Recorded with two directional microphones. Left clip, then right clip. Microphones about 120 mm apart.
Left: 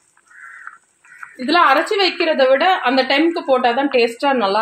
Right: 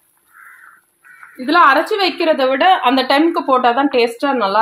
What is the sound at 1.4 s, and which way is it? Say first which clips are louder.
A woman's voice: right 2 dB; 5° left (ahead or behind).